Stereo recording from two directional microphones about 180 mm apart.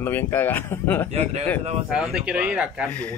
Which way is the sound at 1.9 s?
5° right (ahead or behind).